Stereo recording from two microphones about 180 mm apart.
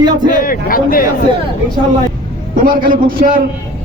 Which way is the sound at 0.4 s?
50° left (ahead or behind).